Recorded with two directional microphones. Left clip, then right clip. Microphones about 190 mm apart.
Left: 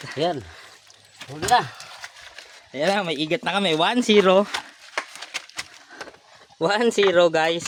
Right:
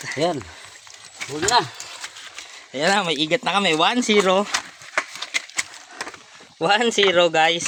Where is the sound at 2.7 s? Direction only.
5° left (ahead or behind); by 4.4 s 35° left (ahead or behind).